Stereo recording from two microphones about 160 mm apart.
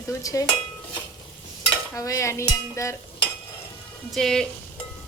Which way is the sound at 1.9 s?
20° left (ahead or behind).